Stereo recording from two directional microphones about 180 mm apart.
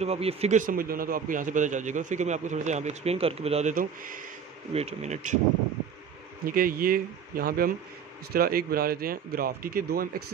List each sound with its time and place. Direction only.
0.0 s a man's voice: 35° right (ahead or behind)
4.7 s speech: 35° right (ahead or behind)
6.4 s a man's voice: 55° right (ahead or behind)